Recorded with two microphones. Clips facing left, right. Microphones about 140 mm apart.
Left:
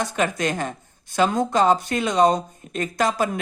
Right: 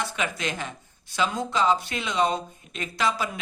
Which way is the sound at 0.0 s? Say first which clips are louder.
Left 6 dB; 45° left (ahead or behind).